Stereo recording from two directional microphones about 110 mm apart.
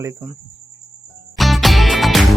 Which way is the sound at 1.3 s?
Centre (ahead or behind).